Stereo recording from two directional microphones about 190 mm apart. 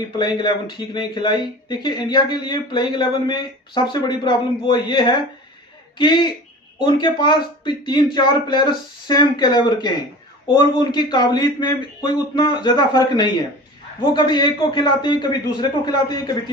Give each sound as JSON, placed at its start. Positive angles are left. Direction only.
{"t": 0.2, "sound": "speech", "side_deg": 20}